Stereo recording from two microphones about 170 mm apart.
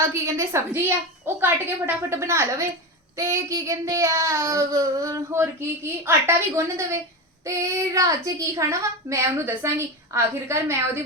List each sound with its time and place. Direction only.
0.0 s speech: 15° right (ahead or behind)